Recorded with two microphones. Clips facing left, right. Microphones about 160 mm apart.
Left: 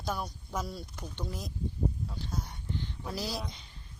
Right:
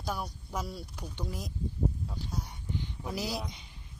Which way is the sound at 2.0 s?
10° right (ahead or behind).